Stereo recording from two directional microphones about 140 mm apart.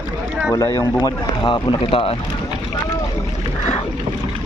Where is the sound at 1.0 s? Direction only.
35° left (ahead or behind).